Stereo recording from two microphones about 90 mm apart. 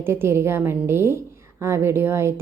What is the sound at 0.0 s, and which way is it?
A woman's voice, 25° right (ahead or behind).